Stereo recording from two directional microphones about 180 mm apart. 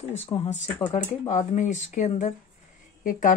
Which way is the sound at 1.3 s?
40° left (ahead or behind).